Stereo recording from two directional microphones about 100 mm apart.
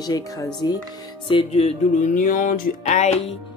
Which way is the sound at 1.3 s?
70° left (ahead or behind).